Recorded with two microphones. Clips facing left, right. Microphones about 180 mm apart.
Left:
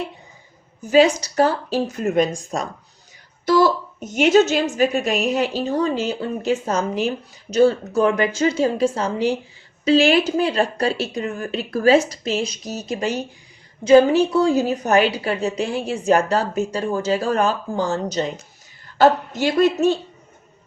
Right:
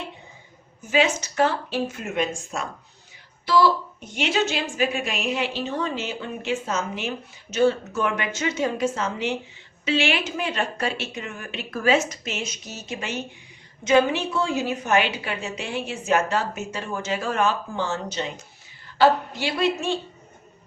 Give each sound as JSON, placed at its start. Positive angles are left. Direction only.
{"t": 0.8, "sound": "a woman's voice", "side_deg": 35}